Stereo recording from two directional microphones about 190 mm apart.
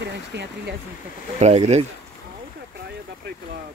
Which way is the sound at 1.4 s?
35° right (ahead or behind).